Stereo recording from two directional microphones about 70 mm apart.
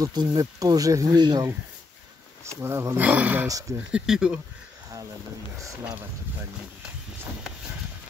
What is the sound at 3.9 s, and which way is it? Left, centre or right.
Speech, centre.